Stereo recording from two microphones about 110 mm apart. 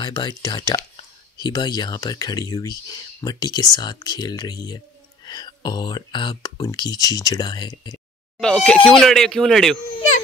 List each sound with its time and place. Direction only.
0.0 s speech: 40° left (ahead or behind)
8.4 s speech: 5° left (ahead or behind)